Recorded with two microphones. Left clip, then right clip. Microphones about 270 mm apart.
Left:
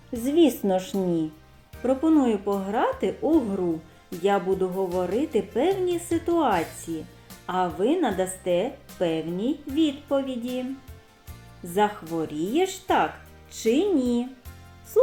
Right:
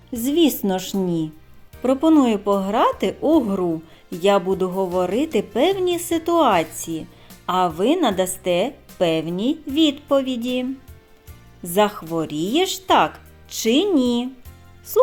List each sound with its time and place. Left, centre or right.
0.1 s speech: right